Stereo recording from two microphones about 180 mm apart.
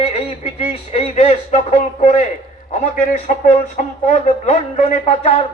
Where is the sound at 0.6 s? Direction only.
35° left (ahead or behind).